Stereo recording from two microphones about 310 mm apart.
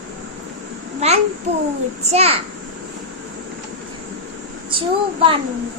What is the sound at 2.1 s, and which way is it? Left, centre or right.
Speech, centre.